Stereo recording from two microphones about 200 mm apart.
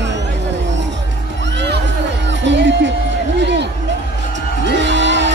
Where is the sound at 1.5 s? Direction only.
55° right (ahead or behind).